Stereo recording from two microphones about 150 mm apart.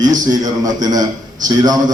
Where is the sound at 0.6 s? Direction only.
25° right (ahead or behind).